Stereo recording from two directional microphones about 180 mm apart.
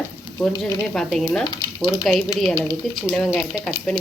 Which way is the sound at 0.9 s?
Centre (ahead or behind).